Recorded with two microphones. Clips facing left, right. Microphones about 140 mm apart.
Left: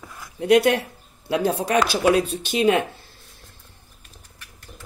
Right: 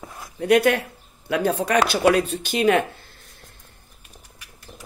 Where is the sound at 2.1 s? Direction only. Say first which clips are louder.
Left 1 dB; 55° right (ahead or behind).